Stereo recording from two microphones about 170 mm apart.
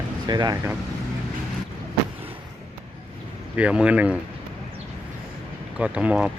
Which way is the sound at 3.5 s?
5° right (ahead or behind).